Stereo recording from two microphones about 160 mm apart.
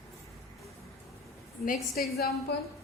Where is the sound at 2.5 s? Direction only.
90° left.